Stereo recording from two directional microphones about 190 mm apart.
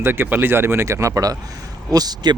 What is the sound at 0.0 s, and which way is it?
Speech, 10° right (ahead or behind).